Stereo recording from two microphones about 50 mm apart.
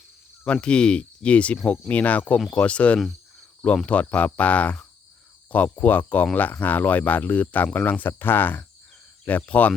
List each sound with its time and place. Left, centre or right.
0.4 s speech: left